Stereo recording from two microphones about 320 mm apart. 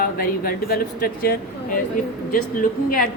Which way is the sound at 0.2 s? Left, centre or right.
Left.